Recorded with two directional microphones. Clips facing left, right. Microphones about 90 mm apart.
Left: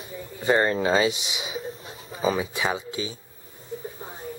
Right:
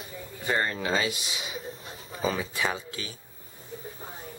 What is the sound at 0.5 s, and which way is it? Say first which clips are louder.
Speech: left 7 dB; 25° left (ahead or behind).